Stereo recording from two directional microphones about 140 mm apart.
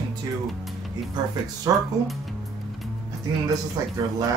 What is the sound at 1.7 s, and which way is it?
Speech, 25° right (ahead or behind).